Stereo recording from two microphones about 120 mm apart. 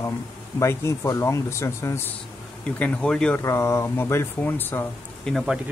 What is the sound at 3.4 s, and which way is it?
Speech, 25° left (ahead or behind).